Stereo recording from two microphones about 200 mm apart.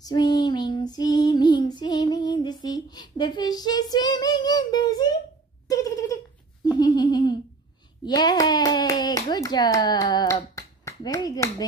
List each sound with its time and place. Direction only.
0.0 s child singing: 20° left (ahead or behind)
5.7 s a sound: 15° left (ahead or behind)
8.0 s hands: 20° left (ahead or behind)